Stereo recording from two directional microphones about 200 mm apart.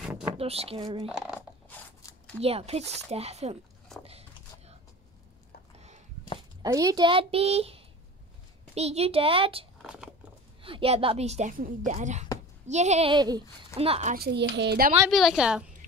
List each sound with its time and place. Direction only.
0.4 s a woman's voice: 30° right (ahead or behind)
1.0 s a sound: 5° right (ahead or behind)
2.4 s speech: 30° right (ahead or behind)
4.0 s a sound: 30° right (ahead or behind)
6.6 s a woman's voice: 20° right (ahead or behind)
9.8 s a sound: 5° right (ahead or behind)
10.6 s speech: 25° right (ahead or behind)
13.1 s a woman's voice: 20° right (ahead or behind)
14.1 s a child's voice: 55° right (ahead or behind)
15.0 s a woman's voice: centre (ahead or behind)